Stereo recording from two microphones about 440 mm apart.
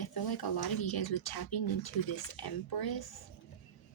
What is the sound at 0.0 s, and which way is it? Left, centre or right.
Speech, left.